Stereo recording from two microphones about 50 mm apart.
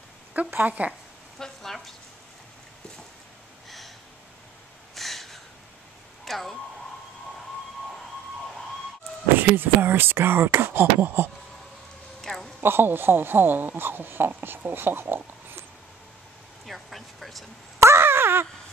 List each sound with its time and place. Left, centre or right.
0.6 s speech: right
1.4 s speech: centre
3.6 s snort: centre
4.9 s a sound: centre
6.2 s speech: centre
9.4 s speech: right
12.2 s a sound: centre
12.5 s speech: right
16.6 s speech: centre
17.7 s a sound: right